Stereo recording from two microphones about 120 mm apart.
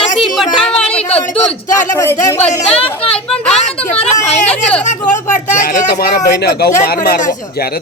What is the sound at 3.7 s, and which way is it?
Speech, 55° left (ahead or behind).